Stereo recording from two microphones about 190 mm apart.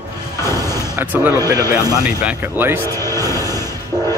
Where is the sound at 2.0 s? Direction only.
10° right (ahead or behind).